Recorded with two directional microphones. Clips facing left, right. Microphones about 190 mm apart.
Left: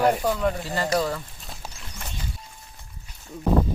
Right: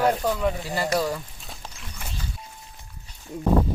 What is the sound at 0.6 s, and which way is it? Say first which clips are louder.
Speech: even; 15° right (ahead or behind).